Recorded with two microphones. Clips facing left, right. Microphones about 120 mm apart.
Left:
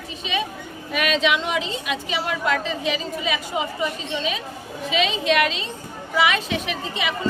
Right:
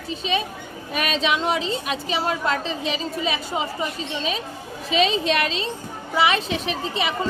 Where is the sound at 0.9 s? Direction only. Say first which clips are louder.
Left 2 dB; 35° right (ahead or behind).